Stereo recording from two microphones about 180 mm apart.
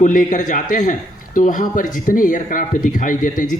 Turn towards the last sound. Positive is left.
turn(degrees=45)  # may be behind; listen again after turning